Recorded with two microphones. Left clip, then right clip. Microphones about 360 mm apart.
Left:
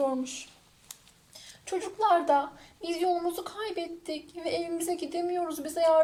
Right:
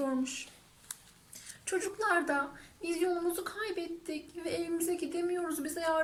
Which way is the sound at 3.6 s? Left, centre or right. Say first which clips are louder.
Left 3 dB; centre.